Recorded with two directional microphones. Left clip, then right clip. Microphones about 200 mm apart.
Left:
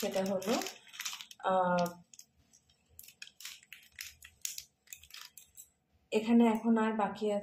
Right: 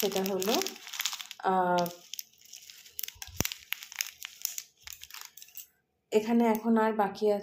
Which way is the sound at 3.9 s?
30° right (ahead or behind).